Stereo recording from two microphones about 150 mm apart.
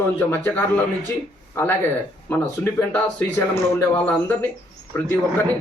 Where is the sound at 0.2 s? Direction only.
10° left (ahead or behind).